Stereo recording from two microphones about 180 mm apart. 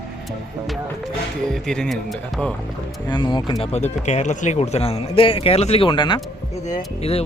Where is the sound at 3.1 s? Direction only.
25° left (ahead or behind).